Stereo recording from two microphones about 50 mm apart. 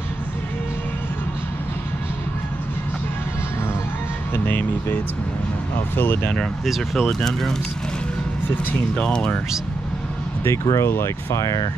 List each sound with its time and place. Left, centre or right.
4.5 s a sound: left
5.9 s speech: left
6.3 s speech: centre
8.7 s speech: centre
10.4 s speech: left
11.3 s speech: left